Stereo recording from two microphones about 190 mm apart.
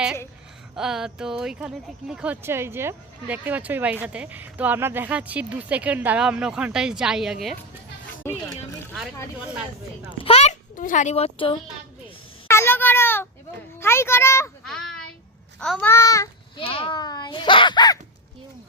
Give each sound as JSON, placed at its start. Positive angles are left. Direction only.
{"t": 0.8, "sound": "speech", "side_deg": -5}
{"t": 8.2, "sound": "speech", "side_deg": 10}
{"t": 10.2, "sound": "speech", "side_deg": 35}
{"t": 12.5, "sound": "a child's voice", "side_deg": 10}
{"t": 14.7, "sound": "a sound", "side_deg": 0}
{"t": 15.6, "sound": "a child's voice", "side_deg": 0}
{"t": 15.9, "sound": "a child's voice", "side_deg": 15}
{"t": 16.6, "sound": "a child's voice", "side_deg": 30}